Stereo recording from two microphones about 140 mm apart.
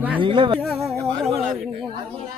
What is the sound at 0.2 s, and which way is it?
Speech, 35° right (ahead or behind).